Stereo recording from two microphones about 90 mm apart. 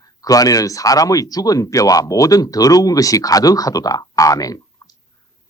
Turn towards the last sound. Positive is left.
turn(degrees=40)  # may be behind; listen again after turning